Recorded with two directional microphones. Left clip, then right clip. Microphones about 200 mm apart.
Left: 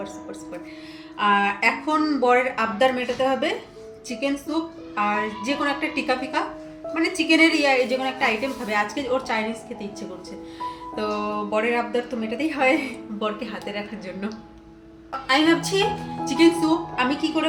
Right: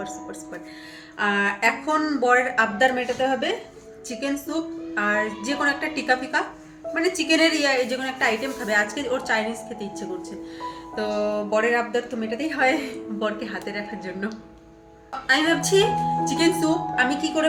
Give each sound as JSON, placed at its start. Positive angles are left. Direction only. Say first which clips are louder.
{"t": 1.2, "sound": "a woman's voice", "louder": "left 2 dB", "side_deg": -10}
{"t": 10.6, "sound": "a woman's voice", "louder": "left 1 dB", "side_deg": -5}